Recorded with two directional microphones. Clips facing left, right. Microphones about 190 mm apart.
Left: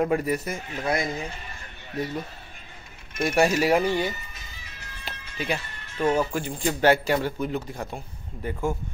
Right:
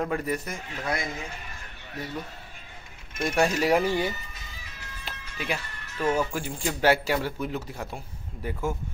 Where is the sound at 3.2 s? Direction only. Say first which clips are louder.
Left 3 dB; 5° left (ahead or behind).